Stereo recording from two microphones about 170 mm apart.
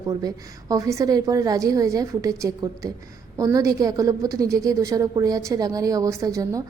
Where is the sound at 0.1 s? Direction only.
20° right (ahead or behind).